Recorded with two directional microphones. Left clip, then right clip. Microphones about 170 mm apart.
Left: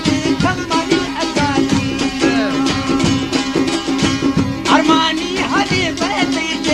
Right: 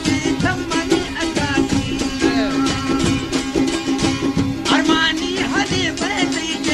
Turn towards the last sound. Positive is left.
turn(degrees=40)  # may be behind; listen again after turning